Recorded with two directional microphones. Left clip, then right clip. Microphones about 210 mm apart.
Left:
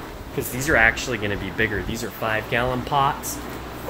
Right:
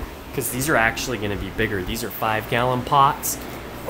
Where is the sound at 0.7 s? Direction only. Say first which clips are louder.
Left 2 dB; 10° right (ahead or behind).